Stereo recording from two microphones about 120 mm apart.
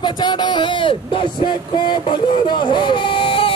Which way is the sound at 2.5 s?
40° left (ahead or behind).